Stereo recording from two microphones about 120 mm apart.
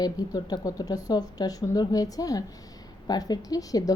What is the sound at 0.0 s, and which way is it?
A woman's voice, 35° left (ahead or behind).